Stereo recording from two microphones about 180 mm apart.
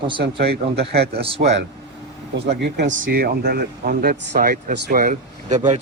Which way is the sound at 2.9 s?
50° right (ahead or behind).